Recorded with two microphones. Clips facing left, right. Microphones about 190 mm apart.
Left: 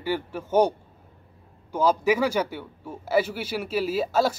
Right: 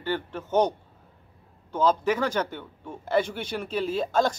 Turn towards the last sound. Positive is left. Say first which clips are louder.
# left 1 dB
turn(degrees=5)  # may be behind; listen again after turning